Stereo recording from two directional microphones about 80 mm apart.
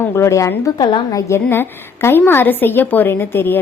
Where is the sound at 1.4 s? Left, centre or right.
Left.